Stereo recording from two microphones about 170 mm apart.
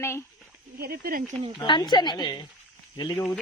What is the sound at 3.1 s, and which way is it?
Speech, 10° left (ahead or behind).